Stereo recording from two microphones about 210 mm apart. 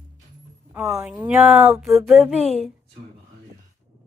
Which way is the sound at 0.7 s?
15° right (ahead or behind).